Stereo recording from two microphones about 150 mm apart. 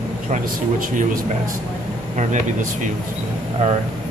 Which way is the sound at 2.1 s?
55° right (ahead or behind).